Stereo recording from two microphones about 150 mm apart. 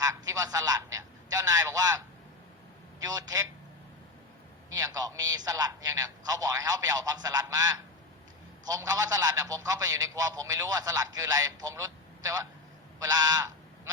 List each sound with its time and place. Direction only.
0.0 s a man's voice: 25° right (ahead or behind)
3.0 s a man's voice: 25° right (ahead or behind)
4.7 s a man's voice: 25° right (ahead or behind)